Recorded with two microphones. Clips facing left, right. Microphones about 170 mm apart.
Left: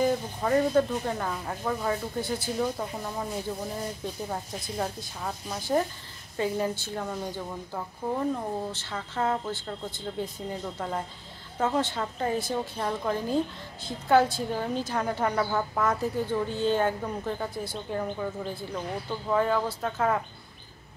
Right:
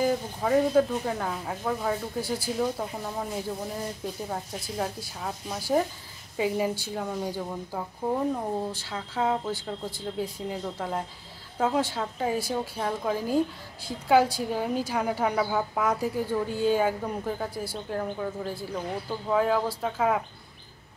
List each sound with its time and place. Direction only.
0.0 s a woman's voice: 5° right (ahead or behind)